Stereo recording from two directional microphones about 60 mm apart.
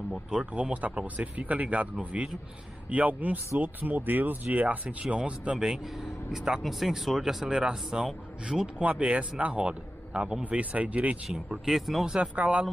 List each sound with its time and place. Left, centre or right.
0.6 s speech: right
5.6 s speech: centre
11.2 s speech: centre
12.1 s speech: right